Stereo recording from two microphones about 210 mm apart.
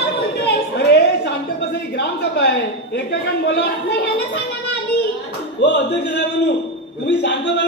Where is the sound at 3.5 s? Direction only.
55° left (ahead or behind).